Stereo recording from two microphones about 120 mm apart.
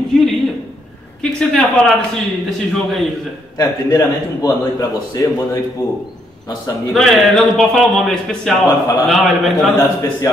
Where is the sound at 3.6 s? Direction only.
30° left (ahead or behind).